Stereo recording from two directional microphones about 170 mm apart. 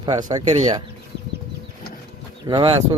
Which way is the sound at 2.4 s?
20° right (ahead or behind).